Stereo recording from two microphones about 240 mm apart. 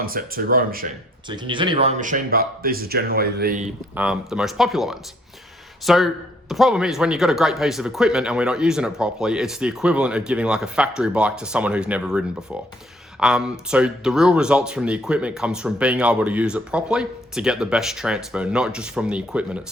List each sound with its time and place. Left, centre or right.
0.0 s speech: right
1.3 s speech: centre; by 3.7 s right
3.9 s speech: centre